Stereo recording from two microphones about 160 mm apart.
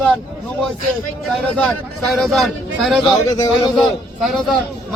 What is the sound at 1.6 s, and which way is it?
A man's voice, centre (ahead or behind).